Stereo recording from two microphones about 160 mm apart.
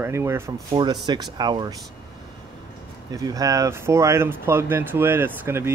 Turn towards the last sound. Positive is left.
turn(degrees=-15)  # may be behind; listen again after turning